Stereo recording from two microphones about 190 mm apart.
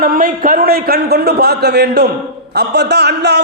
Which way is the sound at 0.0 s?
50° right (ahead or behind).